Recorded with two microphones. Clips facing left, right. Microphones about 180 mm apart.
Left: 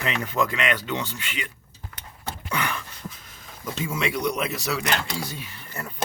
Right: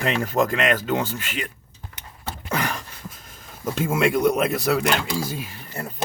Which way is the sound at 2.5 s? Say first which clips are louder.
Right 3 dB; 40° right (ahead or behind).